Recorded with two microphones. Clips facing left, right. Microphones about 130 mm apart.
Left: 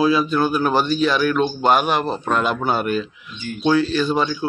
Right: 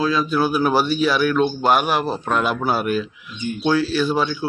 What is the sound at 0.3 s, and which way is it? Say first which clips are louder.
A man's voice: even; 10° right (ahead or behind).